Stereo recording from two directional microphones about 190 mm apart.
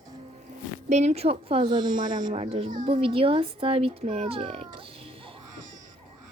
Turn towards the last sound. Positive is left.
turn(degrees=-30)  # may be behind; listen again after turning